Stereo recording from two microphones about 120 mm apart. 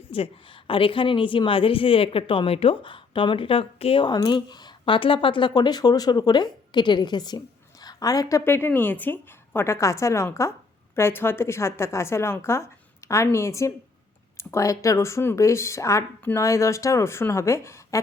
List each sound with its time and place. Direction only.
0.1 s a woman's voice: 50° left (ahead or behind)
4.0 s a woman's voice: 35° left (ahead or behind)